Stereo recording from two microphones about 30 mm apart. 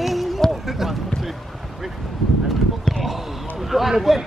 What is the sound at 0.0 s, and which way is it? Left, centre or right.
Run, centre.